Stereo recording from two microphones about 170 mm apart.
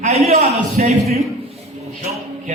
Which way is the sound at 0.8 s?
50° right (ahead or behind).